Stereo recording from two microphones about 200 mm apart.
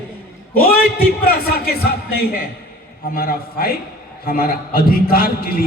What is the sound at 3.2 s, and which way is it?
A man's voice, 50° left (ahead or behind).